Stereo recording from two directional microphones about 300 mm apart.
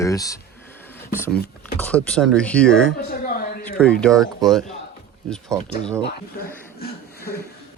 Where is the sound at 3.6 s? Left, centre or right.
Centre.